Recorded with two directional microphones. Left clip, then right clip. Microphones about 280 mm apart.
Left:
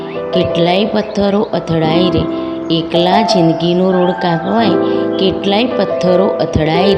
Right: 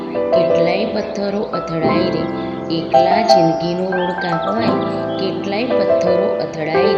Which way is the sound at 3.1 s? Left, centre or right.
Left.